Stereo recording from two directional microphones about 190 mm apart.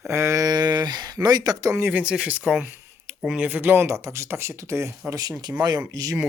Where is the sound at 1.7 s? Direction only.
10° right (ahead or behind).